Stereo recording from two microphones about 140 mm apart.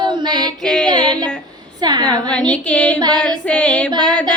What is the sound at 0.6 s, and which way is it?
Child singing, 5° left (ahead or behind).